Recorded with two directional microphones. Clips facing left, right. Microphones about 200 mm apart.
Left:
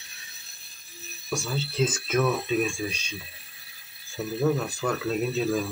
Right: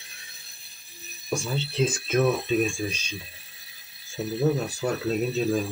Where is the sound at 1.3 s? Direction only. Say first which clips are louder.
Right 2 dB; 25° right (ahead or behind).